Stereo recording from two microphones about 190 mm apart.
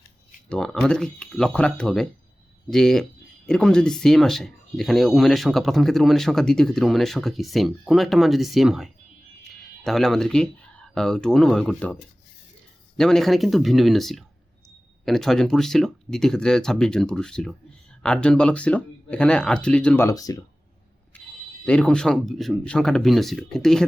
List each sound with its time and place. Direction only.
0.4 s speech: 5° left (ahead or behind)
13.0 s speech: centre (ahead or behind)
20.1 s speech: 20° left (ahead or behind)
21.6 s speech: 5° left (ahead or behind)